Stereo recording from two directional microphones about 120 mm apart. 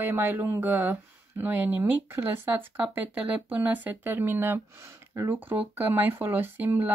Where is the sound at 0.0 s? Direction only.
20° right (ahead or behind).